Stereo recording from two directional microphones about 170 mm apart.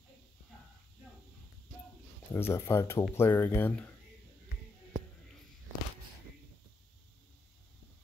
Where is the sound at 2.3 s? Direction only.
15° left (ahead or behind).